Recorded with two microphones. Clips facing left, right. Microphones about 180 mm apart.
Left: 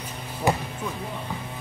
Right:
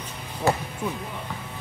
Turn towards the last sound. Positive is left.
turn(degrees=15)  # may be behind; listen again after turning